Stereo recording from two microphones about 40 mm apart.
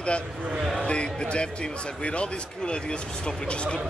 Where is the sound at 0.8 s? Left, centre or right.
Left.